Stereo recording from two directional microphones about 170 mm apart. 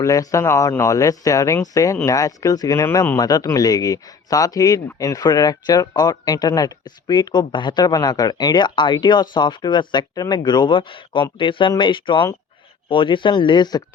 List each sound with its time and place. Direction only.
0.0 s speech: 20° left (ahead or behind)